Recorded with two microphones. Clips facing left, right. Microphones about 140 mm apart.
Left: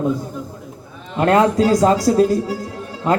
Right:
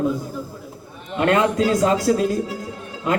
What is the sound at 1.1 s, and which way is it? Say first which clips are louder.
Music: left 4 dB; 35° left (ahead or behind).